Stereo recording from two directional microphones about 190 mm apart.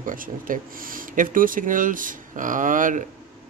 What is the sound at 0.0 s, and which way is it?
Speech, 45° right (ahead or behind).